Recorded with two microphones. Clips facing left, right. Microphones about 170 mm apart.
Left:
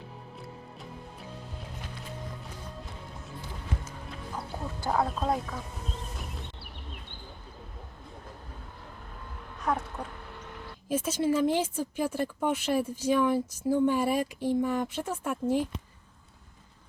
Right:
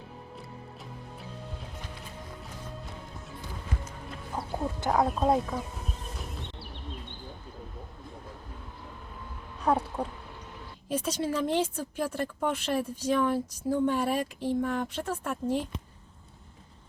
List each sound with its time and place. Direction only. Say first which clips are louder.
4.9 s speech: right 3 dB; 15° right (ahead or behind)
9.6 s a sound: right 4 dB; 30° right (ahead or behind)
10.8 s a woman's voice: left 3 dB; 5° left (ahead or behind)